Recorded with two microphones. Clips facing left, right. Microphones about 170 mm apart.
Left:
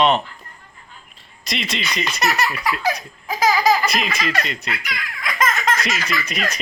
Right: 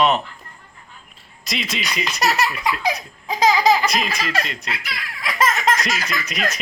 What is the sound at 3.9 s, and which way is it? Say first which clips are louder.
Speech: even; centre (ahead or behind).